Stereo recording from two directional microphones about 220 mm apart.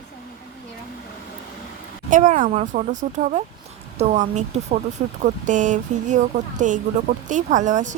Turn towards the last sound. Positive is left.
turn(degrees=-35)  # may be behind; listen again after turning